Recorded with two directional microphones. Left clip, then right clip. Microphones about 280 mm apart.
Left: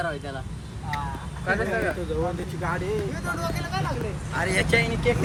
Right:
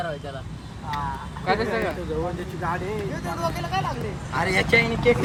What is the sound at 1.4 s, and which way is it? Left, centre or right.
Speech, right.